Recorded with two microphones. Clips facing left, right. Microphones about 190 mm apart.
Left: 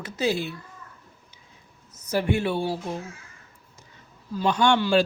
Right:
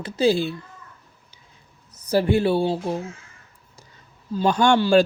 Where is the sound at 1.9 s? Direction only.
35° right (ahead or behind).